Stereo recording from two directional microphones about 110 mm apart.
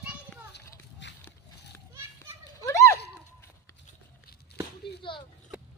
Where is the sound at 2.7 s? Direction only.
25° left (ahead or behind).